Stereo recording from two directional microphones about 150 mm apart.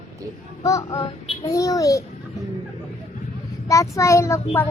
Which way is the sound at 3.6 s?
20° left (ahead or behind).